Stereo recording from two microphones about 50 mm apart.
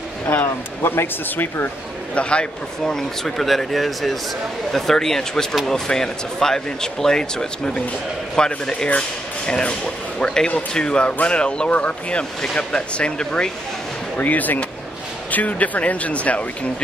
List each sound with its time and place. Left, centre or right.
0.3 s speech: left
2.1 s speech: left
14.1 s speech: left